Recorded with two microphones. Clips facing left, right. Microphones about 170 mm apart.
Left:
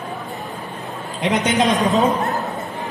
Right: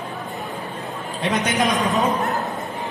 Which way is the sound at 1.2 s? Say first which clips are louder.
Left 3 dB; 20° left (ahead or behind).